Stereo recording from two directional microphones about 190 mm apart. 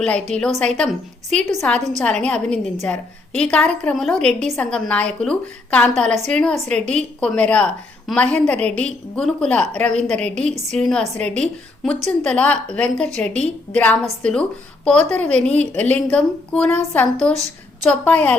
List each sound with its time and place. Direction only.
0.0 s a woman's voice: 5° left (ahead or behind)
1.4 s a woman's voice: 40° right (ahead or behind)
1.6 s a woman's voice: 5° left (ahead or behind)